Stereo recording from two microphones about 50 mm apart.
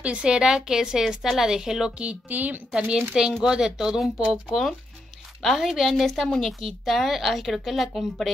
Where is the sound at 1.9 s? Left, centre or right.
Right.